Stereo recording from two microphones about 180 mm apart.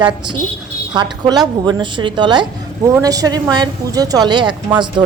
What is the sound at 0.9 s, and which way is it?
Speech, 25° right (ahead or behind).